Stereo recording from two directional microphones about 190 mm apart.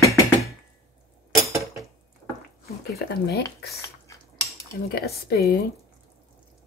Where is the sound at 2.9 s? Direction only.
55° left (ahead or behind).